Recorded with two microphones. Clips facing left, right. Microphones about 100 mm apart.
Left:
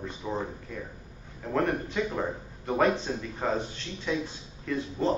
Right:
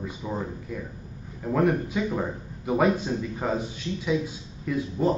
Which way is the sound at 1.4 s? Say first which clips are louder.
Right 4 dB; 5° right (ahead or behind).